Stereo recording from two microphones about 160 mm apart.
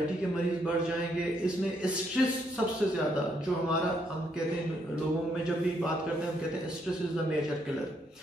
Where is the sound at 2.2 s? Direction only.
Centre (ahead or behind).